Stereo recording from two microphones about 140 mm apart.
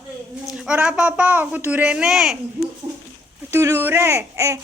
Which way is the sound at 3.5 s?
20° right (ahead or behind).